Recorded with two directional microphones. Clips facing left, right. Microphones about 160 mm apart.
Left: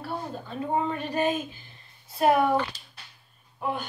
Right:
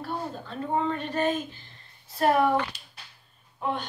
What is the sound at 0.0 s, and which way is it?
A woman's voice, 5° left (ahead or behind).